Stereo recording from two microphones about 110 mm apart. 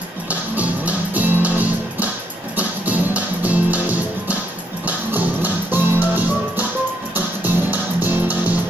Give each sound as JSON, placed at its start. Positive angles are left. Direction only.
{"t": 0.3, "sound": "music", "side_deg": -15}
{"t": 4.8, "sound": "music", "side_deg": -15}